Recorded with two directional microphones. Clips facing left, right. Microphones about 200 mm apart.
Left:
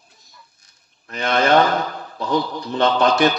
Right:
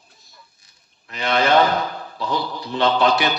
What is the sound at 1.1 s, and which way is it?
Speech, 45° left (ahead or behind).